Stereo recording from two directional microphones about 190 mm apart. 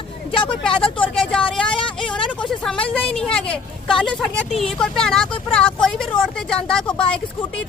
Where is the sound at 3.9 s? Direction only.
5° left (ahead or behind).